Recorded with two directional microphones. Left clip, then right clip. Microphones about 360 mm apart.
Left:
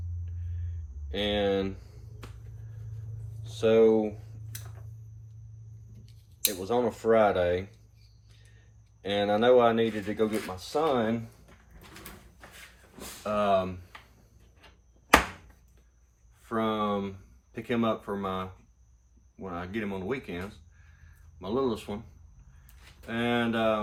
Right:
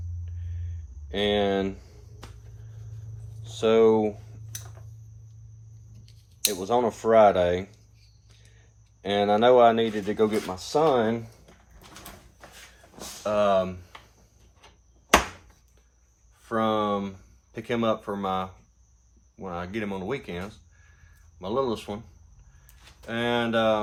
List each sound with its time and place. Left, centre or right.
1.1 s speech: right
3.6 s speech: right
6.1 s speech: right
9.0 s speech: right
13.2 s speech: right
16.4 s speech: right
23.0 s speech: right